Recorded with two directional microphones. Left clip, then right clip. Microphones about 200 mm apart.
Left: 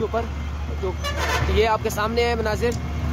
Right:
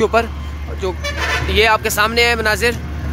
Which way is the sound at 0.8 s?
5° right (ahead or behind).